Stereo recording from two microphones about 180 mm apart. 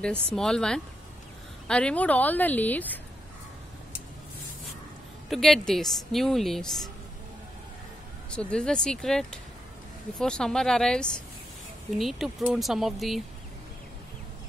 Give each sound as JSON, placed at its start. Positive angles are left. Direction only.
{"t": 0.0, "sound": "a woman's voice", "side_deg": 5}
{"t": 5.3, "sound": "a woman's voice", "side_deg": 0}
{"t": 8.3, "sound": "a woman's voice", "side_deg": 5}